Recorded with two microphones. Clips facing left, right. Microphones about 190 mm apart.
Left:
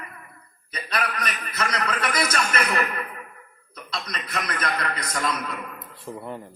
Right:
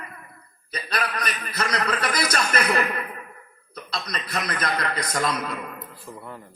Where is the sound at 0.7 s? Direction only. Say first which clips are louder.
Even; 35° right (ahead or behind).